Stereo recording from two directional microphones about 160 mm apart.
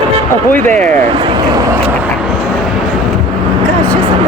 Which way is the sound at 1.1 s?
30° right (ahead or behind).